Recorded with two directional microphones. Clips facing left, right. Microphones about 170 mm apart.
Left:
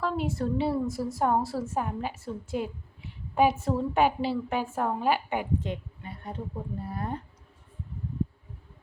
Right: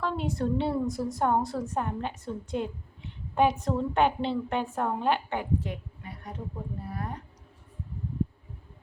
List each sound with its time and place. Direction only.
0.0 s a woman's voice: centre (ahead or behind); by 7.2 s 30° left (ahead or behind)